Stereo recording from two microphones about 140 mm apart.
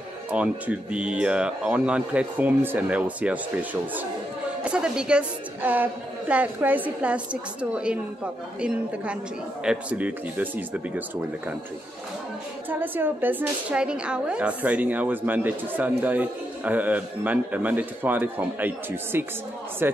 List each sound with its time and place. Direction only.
0.3 s a woman's voice: 10° right (ahead or behind)
12.6 s a woman's voice: 15° right (ahead or behind)